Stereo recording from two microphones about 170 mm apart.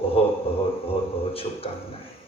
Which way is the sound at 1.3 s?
35° left (ahead or behind).